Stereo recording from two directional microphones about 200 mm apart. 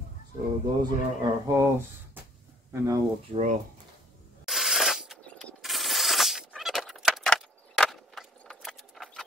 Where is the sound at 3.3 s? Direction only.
35° right (ahead or behind).